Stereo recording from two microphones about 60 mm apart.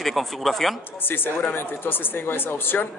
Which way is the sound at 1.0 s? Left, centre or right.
Left.